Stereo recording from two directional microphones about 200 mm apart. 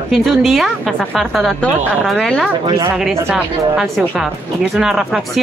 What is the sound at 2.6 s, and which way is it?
Speech, 20° right (ahead or behind).